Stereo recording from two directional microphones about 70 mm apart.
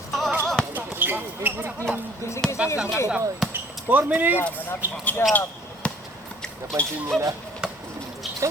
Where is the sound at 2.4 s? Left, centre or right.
Centre.